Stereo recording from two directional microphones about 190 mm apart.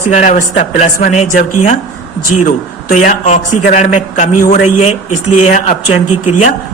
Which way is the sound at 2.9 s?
40° left (ahead or behind).